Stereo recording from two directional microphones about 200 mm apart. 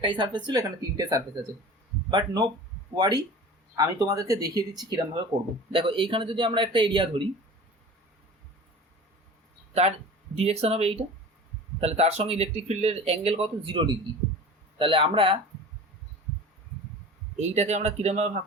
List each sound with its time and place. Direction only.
0.0 s speech: 25° right (ahead or behind)
10.3 s speech: 30° right (ahead or behind)
17.3 s speech: 35° right (ahead or behind)